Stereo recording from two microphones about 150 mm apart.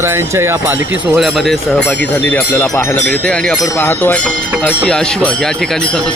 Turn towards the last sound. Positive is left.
turn(degrees=5)  # may be behind; listen again after turning